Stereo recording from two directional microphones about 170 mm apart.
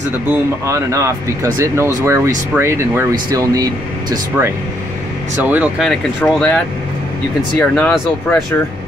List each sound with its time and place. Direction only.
0.3 s speech: 15° right (ahead or behind)
5.4 s speech: 10° right (ahead or behind)
5.9 s speech: 5° left (ahead or behind)